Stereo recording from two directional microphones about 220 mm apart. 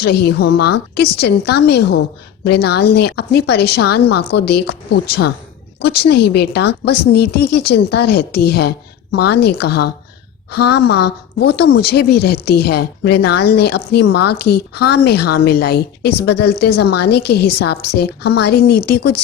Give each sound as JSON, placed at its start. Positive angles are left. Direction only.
{"t": 0.0, "sound": "a woman's voice", "side_deg": 45}